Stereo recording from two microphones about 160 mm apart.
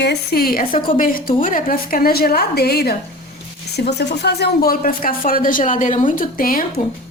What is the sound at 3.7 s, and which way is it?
Speech, 90° left.